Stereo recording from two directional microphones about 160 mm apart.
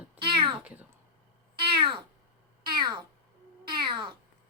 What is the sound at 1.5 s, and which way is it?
Cat, 30° right (ahead or behind).